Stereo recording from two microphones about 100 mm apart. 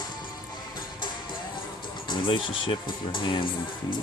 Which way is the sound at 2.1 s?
60° left (ahead or behind).